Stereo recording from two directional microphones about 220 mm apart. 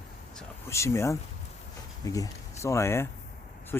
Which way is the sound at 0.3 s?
10° left (ahead or behind).